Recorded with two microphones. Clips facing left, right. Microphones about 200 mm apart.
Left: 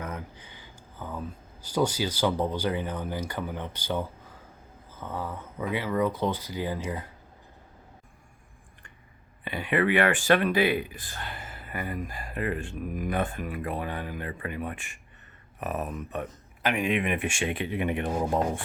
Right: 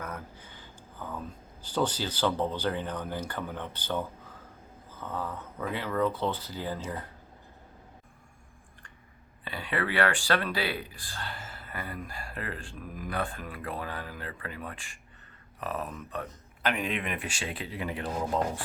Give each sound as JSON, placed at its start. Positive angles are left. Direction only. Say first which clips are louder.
{"t": 0.0, "sound": "a sound", "louder": "left 3 dB", "side_deg": 15}
{"t": 1.6, "sound": "speech", "louder": "left 3 dB", "side_deg": 10}
{"t": 9.4, "sound": "speech", "louder": "left 6 dB", "side_deg": 15}